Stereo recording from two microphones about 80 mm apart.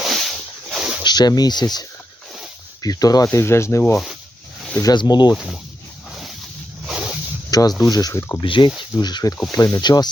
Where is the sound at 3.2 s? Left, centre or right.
Left.